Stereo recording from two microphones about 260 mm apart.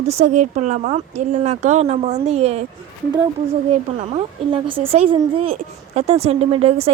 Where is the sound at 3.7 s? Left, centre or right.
Right.